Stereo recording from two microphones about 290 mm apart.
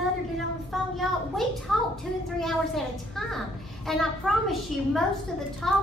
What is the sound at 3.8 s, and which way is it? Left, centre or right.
A woman's voice, centre.